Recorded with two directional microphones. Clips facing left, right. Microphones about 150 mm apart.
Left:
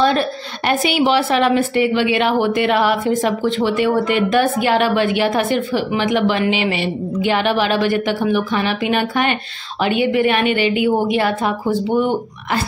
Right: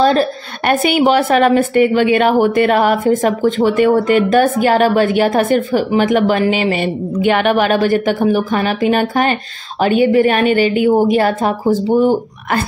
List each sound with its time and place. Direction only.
0.0 s a woman's voice: 35° right (ahead or behind)
0.7 s a woman's voice: 50° right (ahead or behind)